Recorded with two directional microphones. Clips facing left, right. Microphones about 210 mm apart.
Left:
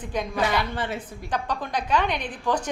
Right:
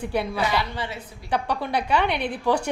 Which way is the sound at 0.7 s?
50° left (ahead or behind).